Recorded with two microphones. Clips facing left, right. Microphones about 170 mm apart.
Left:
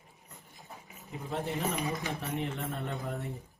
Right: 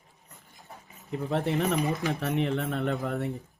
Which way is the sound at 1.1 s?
65° right (ahead or behind).